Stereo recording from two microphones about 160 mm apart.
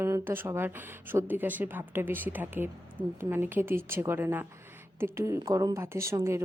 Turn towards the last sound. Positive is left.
turn(degrees=-15)  # may be behind; listen again after turning